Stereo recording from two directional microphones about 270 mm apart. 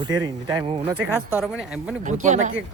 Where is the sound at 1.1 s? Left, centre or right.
Centre.